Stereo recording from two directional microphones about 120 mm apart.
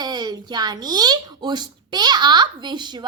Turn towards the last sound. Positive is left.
turn(degrees=-40)  # may be behind; listen again after turning